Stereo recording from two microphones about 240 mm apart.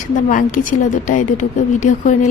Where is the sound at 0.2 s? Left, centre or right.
Left.